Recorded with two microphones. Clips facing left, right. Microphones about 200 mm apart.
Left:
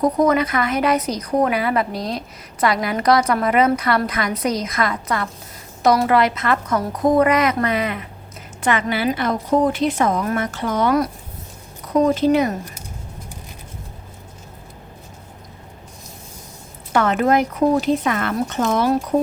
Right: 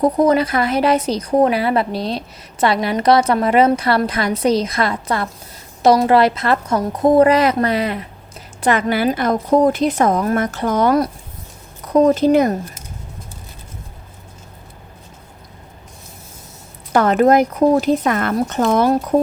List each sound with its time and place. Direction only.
0.0 s a woman's voice: 30° right (ahead or behind)
16.9 s a woman's voice: 40° right (ahead or behind)